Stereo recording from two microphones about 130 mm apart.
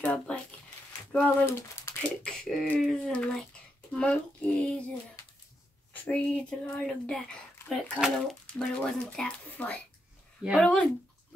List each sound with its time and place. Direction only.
0.0 s a sound: 10° left (ahead or behind)
1.1 s speech: 20° left (ahead or behind)
2.2 s speech: 5° left (ahead or behind)
3.9 s a sound: 10° left (ahead or behind)
6.0 s speech: 10° left (ahead or behind)
10.4 s speech: 5° right (ahead or behind)